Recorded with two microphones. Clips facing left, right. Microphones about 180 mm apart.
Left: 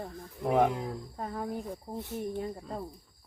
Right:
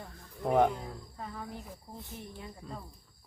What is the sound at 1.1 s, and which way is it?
Speech, 45° left (ahead or behind).